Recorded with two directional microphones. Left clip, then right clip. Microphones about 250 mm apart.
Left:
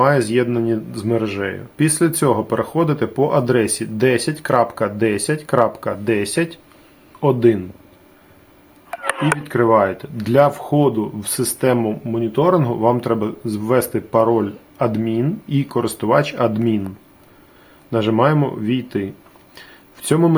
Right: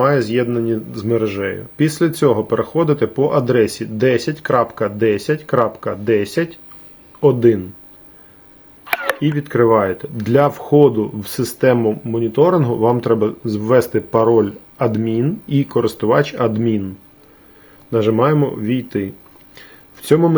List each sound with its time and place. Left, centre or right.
0.0 s speech: centre
9.5 s speech: centre
17.9 s speech: centre